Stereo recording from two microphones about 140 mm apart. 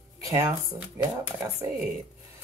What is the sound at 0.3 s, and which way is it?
Speech, 20° right (ahead or behind).